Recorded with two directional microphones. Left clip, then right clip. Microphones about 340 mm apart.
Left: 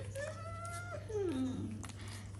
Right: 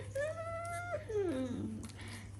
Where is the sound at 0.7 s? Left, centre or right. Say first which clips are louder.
Right 3 dB; centre.